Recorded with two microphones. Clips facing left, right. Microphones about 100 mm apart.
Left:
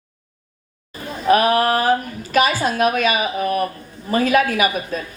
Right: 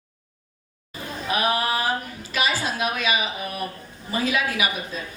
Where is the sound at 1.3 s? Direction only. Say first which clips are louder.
Left 9 dB; 50° left (ahead or behind).